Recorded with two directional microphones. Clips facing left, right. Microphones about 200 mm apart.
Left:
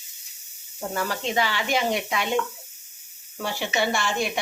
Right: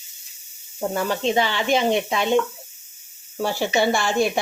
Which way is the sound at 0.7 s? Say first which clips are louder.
Right 5 dB; 25° right (ahead or behind).